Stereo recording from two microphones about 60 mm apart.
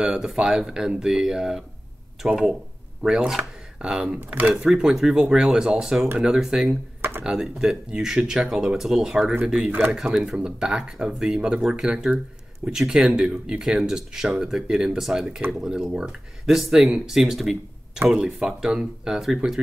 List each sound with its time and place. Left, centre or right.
0.0 s speech: centre
4.3 s speech: right
4.6 s speech: centre
7.0 s computer keyboard: right
7.2 s speech: centre
9.7 s speech: right
9.9 s speech: centre